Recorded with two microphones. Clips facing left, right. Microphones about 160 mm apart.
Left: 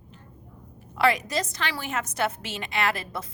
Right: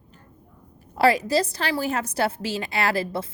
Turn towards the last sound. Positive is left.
turn(degrees=-30)  # may be behind; listen again after turning